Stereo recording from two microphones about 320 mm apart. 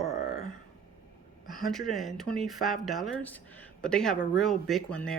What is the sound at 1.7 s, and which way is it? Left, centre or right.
Speech, centre.